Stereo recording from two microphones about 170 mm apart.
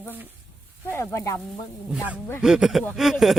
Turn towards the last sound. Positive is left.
turn(degrees=0)  # may be behind; listen again after turning